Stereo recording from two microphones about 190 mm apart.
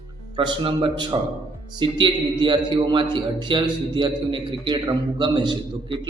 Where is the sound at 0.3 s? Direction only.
25° right (ahead or behind).